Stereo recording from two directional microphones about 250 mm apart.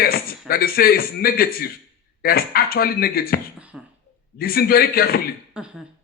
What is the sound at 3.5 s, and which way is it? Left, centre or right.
Speech, centre.